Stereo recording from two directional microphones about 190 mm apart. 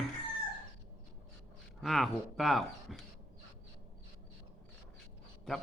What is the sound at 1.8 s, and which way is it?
Speech, centre (ahead or behind).